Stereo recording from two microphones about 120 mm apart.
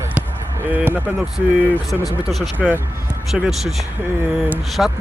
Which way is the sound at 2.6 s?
Centre (ahead or behind).